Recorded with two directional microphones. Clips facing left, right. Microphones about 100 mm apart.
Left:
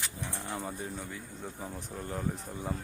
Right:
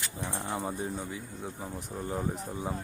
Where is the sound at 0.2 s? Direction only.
30° right (ahead or behind).